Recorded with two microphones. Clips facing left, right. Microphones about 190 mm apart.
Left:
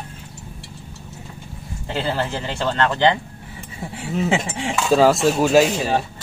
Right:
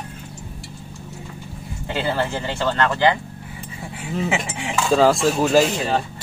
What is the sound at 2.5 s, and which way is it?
Speech, 20° left (ahead or behind).